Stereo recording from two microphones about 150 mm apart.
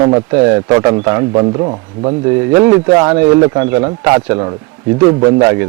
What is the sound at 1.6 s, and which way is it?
Speech, 30° right (ahead or behind).